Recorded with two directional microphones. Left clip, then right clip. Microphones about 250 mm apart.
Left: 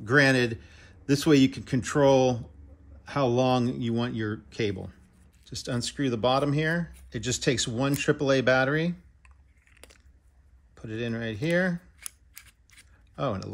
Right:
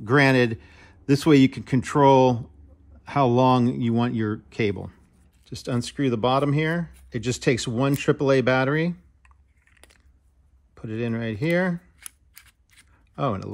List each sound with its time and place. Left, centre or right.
0.0 s speech: right
9.2 s typing: centre
10.7 s speech: right
12.0 s scissors: centre
13.1 s speech: right